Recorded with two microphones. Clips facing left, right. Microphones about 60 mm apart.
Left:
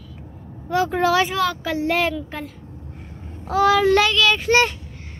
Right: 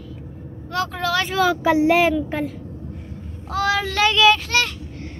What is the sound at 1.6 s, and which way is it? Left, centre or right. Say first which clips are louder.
Speech: right 5 dB; centre.